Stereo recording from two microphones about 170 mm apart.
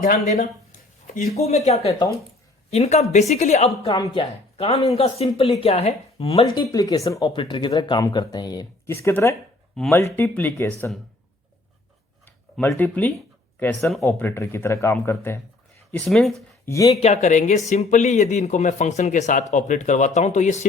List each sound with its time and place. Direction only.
0.0 s a sound: 45° left (ahead or behind)
1.3 s speech: 40° left (ahead or behind)
3.9 s speech: 25° left (ahead or behind)
4.2 s speech: 35° left (ahead or behind)
6.7 s speech: 20° left (ahead or behind)
9.8 s speech: centre (ahead or behind)
12.2 s a sound: 10° left (ahead or behind)
13.6 s speech: 10° left (ahead or behind)
14.1 s speech: 15° left (ahead or behind)
15.9 s speech: 5° left (ahead or behind)
16.6 s speech: 20° left (ahead or behind)
16.9 s speech: 40° left (ahead or behind)